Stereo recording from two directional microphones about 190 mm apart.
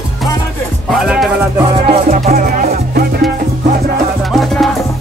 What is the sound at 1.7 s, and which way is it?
Music, 30° right (ahead or behind).